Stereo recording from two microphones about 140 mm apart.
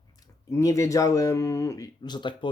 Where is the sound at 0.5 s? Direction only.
20° left (ahead or behind).